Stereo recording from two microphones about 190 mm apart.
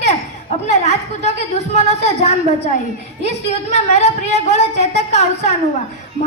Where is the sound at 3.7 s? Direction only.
35° left (ahead or behind).